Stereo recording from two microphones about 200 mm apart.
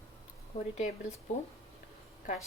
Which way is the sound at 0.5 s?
30° left (ahead or behind).